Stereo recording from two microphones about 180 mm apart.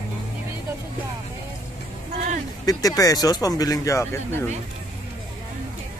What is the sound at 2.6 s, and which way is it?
Speech, 20° left (ahead or behind).